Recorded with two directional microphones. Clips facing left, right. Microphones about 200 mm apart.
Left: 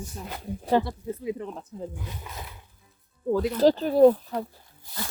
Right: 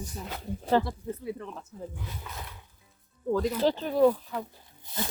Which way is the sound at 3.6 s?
40° left (ahead or behind).